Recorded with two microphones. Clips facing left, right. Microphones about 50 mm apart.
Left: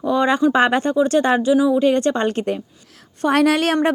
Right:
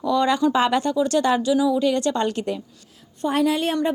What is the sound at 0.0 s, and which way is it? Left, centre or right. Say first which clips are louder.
Speech: left 3 dB; left.